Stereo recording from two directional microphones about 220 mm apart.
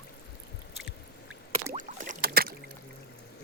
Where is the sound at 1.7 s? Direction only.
35° right (ahead or behind).